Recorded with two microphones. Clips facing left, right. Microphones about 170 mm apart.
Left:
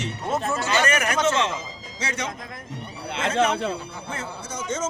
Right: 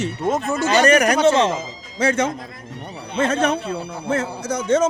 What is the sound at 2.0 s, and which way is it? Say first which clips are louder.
Speech: right 12 dB; 50° right (ahead or behind).